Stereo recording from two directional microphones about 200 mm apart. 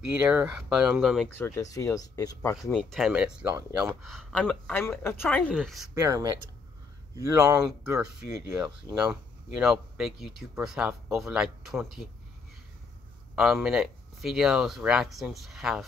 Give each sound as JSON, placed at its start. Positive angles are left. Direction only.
{"t": 0.3, "sound": "speech", "side_deg": -5}
{"t": 1.4, "sound": "speech", "side_deg": 15}
{"t": 2.7, "sound": "speech", "side_deg": 0}
{"t": 3.5, "sound": "speech", "side_deg": -15}
{"t": 4.0, "sound": "speech", "side_deg": 0}
{"t": 5.9, "sound": "speech", "side_deg": -15}
{"t": 9.5, "sound": "speech", "side_deg": -5}
{"t": 13.4, "sound": "speech", "side_deg": 0}